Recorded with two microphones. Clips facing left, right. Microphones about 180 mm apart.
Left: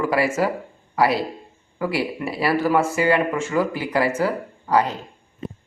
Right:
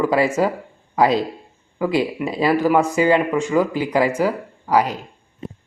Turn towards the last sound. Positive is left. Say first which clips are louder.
# right 2 dB
turn(degrees=-10)  # may be behind; listen again after turning